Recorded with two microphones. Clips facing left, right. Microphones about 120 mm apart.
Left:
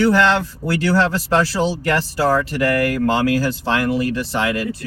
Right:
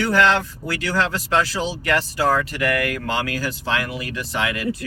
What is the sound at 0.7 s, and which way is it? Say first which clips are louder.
Speech: left 6 dB; 35° left (ahead or behind).